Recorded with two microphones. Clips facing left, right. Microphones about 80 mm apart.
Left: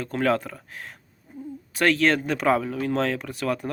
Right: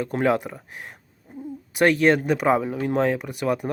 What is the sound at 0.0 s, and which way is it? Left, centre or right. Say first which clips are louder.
Speech: right 2 dB; centre.